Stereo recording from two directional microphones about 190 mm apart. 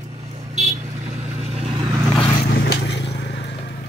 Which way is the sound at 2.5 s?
55° left (ahead or behind).